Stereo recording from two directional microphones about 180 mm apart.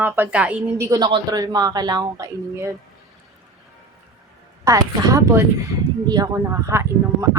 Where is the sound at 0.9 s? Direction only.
20° right (ahead or behind).